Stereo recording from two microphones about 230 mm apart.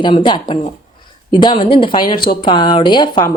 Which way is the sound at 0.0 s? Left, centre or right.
Left.